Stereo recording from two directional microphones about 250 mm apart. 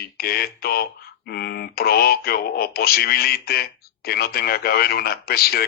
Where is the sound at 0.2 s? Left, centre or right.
Left.